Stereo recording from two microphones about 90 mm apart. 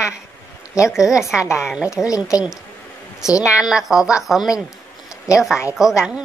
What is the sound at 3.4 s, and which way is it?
A woman's voice, 10° right (ahead or behind).